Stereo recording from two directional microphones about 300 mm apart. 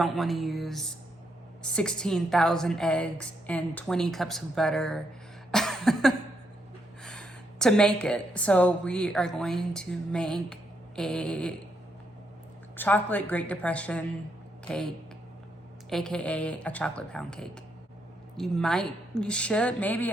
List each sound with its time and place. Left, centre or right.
0.0 s a woman's voice: centre
5.5 s cough: centre
7.0 s a woman's voice: centre
12.7 s a woman's voice: centre